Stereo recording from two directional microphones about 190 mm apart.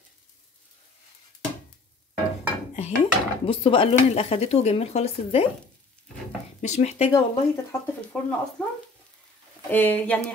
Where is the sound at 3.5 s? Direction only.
30° left (ahead or behind).